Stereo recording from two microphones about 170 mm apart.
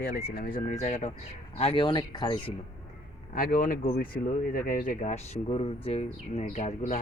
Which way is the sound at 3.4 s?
55° left (ahead or behind).